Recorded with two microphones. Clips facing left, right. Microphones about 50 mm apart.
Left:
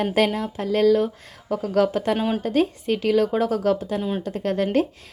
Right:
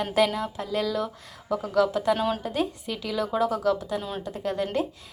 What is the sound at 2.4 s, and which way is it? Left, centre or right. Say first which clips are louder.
A woman's voice: left 7 dB; left.